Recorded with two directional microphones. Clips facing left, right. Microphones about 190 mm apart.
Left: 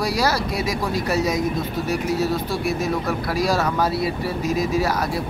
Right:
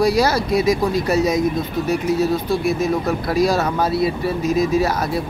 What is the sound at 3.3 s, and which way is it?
Speech, 20° right (ahead or behind).